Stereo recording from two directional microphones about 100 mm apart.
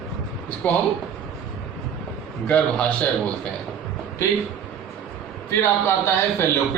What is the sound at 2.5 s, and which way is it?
Speech, 15° left (ahead or behind).